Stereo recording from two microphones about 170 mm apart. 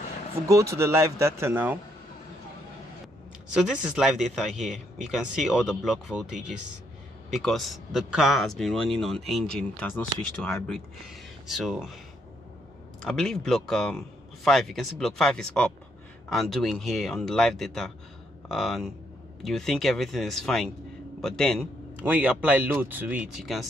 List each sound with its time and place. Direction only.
0.5 s speech: 15° right (ahead or behind)
3.5 s speech: 5° right (ahead or behind)
13.0 s speech: 5° left (ahead or behind)
21.9 s speech: 10° right (ahead or behind)